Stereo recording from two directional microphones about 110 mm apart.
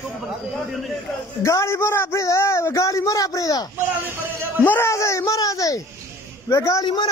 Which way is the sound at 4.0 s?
20° right (ahead or behind).